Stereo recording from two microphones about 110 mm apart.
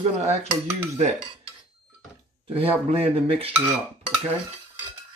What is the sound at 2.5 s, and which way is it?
Speech, 60° right (ahead or behind).